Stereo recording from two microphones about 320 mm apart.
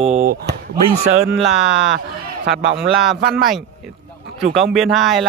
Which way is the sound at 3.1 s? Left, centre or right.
Right.